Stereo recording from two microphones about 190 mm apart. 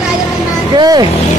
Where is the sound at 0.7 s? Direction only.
20° right (ahead or behind).